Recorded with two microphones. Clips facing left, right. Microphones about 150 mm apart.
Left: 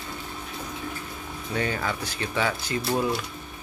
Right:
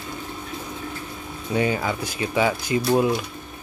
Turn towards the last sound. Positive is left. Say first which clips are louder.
# right 6 dB
turn(degrees=-20)  # may be behind; listen again after turning